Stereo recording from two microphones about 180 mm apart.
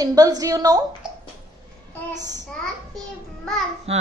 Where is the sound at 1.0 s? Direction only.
5° right (ahead or behind).